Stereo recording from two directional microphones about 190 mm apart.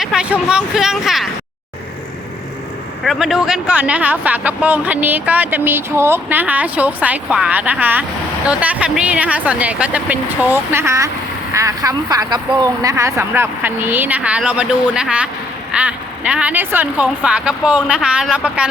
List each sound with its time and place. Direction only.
0.0 s speech: 5° right (ahead or behind)
3.0 s speech: centre (ahead or behind)